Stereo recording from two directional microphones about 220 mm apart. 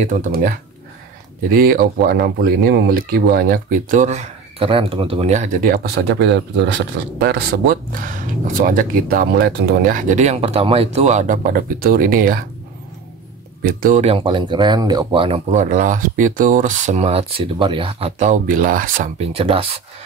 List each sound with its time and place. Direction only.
0.0 s speech: 35° right (ahead or behind)
1.5 s speech: 40° right (ahead or behind)
13.6 s speech: 40° right (ahead or behind)
19.3 s speech: 25° right (ahead or behind)